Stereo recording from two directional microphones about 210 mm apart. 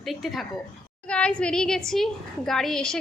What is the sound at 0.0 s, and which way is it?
A woman's voice, centre (ahead or behind).